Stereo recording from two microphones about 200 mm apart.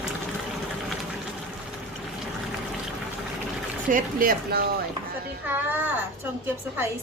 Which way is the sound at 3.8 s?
45° right (ahead or behind).